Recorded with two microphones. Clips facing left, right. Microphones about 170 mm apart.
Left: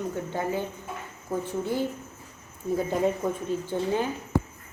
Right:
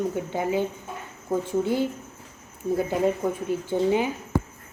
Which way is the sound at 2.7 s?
5° right (ahead or behind).